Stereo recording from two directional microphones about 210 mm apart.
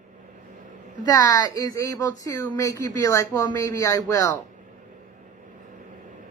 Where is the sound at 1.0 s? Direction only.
20° left (ahead or behind).